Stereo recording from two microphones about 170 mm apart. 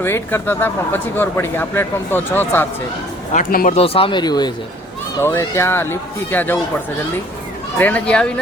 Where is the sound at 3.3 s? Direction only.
55° left (ahead or behind).